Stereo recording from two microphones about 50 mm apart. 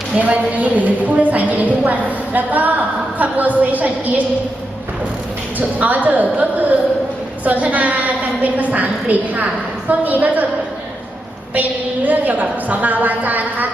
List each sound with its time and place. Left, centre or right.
0.2 s a woman's voice: right
5.5 s a woman's voice: right
11.5 s a woman's voice: right